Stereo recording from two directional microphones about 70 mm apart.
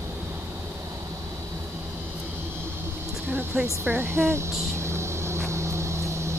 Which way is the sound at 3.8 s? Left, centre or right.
Right.